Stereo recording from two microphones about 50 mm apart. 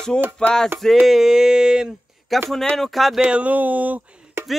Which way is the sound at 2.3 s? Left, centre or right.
Centre.